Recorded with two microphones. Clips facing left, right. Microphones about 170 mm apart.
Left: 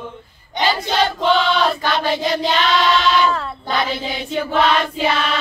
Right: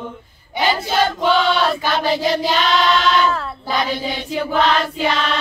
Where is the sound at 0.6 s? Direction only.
5° right (ahead or behind).